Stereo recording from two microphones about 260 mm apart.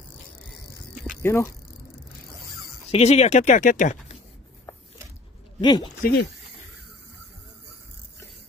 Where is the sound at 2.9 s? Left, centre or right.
Left.